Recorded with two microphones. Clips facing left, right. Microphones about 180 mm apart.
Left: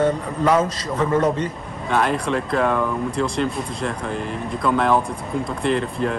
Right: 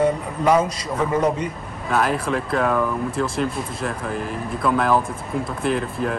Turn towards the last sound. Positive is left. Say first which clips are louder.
# left 1 dB
turn(degrees=-5)  # may be behind; listen again after turning